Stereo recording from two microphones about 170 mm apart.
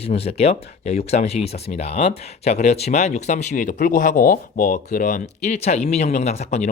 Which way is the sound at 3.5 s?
50° left (ahead or behind).